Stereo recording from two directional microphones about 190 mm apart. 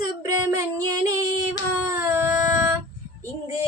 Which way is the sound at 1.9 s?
10° right (ahead or behind).